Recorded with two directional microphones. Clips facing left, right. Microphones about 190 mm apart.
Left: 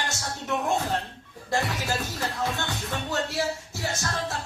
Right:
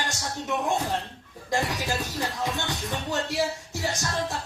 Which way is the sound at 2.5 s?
15° right (ahead or behind).